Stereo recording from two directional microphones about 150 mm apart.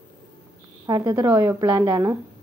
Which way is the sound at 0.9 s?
25° right (ahead or behind).